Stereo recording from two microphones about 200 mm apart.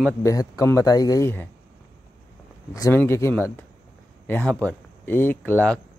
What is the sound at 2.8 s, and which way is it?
Speech, 15° left (ahead or behind).